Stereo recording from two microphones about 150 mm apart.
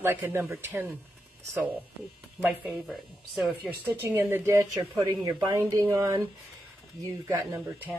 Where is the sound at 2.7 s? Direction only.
Centre (ahead or behind).